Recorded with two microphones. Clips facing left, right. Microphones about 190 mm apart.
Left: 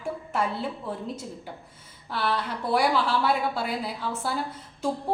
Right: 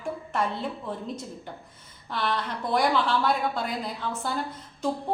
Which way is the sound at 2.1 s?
5° left (ahead or behind).